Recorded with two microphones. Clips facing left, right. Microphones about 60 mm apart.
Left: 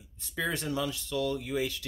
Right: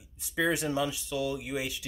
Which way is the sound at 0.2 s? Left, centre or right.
Centre.